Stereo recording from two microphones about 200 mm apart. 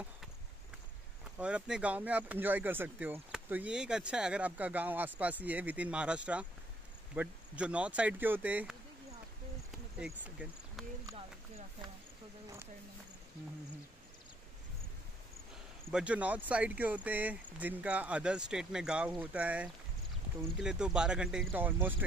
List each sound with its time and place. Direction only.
1.4 s speech: 5° right (ahead or behind)
9.7 s a sound: 5° right (ahead or behind)
11.1 s speech: 25° right (ahead or behind)
15.9 s speech: 5° right (ahead or behind)